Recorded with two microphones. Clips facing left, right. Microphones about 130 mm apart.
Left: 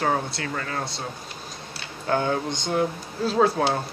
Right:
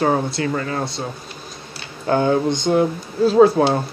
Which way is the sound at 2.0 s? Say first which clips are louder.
Right 7 dB; 20° right (ahead or behind).